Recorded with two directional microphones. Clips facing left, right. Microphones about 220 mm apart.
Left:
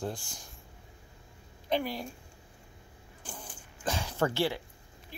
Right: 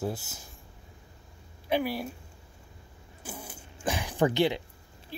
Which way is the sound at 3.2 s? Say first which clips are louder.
Right 4 dB; 10° right (ahead or behind).